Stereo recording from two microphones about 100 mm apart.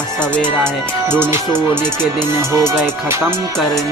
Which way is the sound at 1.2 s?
20° right (ahead or behind).